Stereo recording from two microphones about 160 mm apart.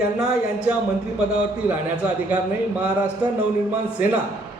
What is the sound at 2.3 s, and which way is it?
Speech, 10° right (ahead or behind).